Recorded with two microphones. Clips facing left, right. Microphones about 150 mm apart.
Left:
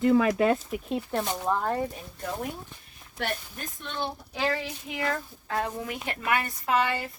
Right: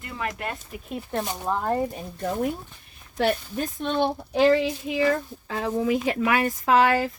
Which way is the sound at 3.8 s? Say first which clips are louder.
Right 9 dB; 75° right (ahead or behind).